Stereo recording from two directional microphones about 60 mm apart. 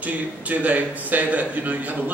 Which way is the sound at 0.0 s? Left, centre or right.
Right.